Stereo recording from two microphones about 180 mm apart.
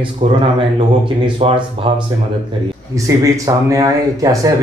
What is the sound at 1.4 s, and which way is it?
Speech, 30° right (ahead or behind).